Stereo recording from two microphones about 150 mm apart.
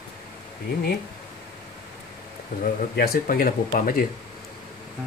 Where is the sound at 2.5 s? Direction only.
65° left (ahead or behind).